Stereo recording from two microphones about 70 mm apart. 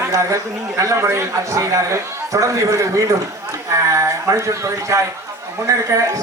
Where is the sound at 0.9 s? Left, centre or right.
Right.